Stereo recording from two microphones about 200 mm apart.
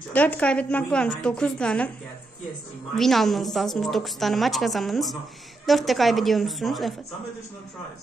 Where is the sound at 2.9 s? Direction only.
Centre (ahead or behind).